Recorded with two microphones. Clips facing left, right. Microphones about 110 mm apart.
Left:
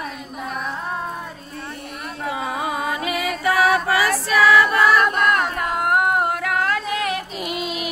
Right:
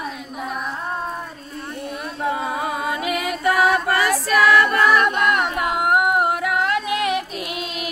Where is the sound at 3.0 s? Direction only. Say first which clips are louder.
Right 2 dB; centre (ahead or behind).